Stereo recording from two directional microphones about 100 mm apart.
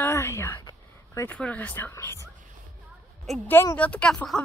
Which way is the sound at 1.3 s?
15° left (ahead or behind).